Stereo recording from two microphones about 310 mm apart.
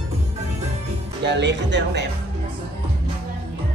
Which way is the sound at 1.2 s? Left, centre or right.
Right.